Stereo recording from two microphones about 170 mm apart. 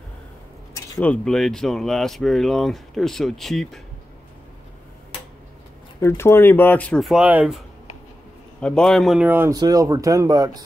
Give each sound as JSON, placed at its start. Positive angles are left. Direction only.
{"t": 0.9, "sound": "speech", "side_deg": 5}
{"t": 5.9, "sound": "speech", "side_deg": 15}
{"t": 8.5, "sound": "speech", "side_deg": 5}